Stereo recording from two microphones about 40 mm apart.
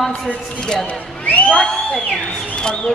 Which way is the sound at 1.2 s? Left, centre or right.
Left.